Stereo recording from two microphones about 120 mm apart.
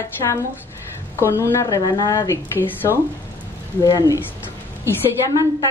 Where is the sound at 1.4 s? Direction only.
25° left (ahead or behind).